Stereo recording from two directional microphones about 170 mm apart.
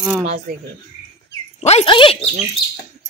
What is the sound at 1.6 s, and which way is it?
Speech, 40° left (ahead or behind).